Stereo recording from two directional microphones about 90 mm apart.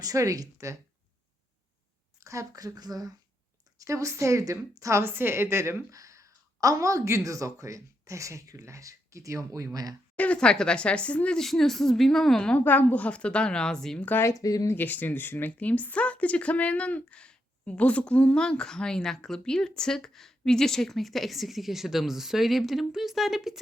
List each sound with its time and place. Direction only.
0.0 s a woman's voice: 40° right (ahead or behind)
2.2 s a woman's voice: 35° right (ahead or behind)
10.2 s speech: 10° left (ahead or behind)
14.0 s speech: 20° left (ahead or behind)
14.3 s speech: 40° left (ahead or behind)
14.8 s speech: 20° left (ahead or behind); by 23.6 s centre (ahead or behind)